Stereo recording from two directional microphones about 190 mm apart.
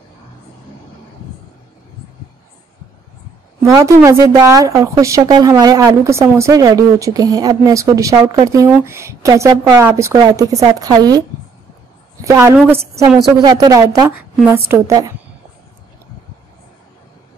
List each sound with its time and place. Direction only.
3.6 s a woman's voice: 15° right (ahead or behind)
12.3 s a woman's voice: 15° right (ahead or behind)